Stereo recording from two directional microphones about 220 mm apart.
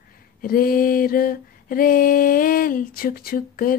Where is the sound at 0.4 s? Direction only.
40° left (ahead or behind).